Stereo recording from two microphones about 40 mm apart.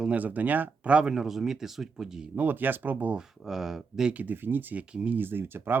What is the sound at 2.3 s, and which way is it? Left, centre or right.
Speech, right.